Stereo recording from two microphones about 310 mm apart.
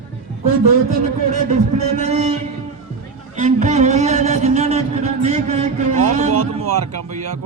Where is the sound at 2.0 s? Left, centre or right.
Right.